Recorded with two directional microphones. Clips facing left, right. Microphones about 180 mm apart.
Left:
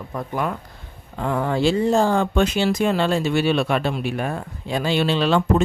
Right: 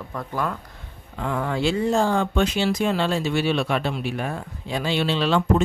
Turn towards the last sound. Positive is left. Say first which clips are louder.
# left 2 dB
turn(degrees=50)  # may be behind; listen again after turning